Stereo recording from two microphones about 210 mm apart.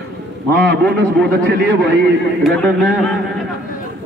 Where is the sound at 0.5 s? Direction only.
55° right (ahead or behind).